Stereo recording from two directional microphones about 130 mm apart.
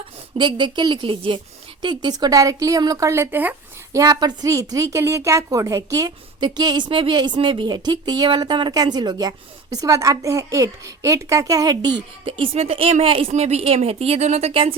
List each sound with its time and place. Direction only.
0.3 s a woman's voice: 40° right (ahead or behind); by 3.5 s 15° right (ahead or behind)
3.9 s a woman's voice: 30° right (ahead or behind); by 14.8 s 45° right (ahead or behind)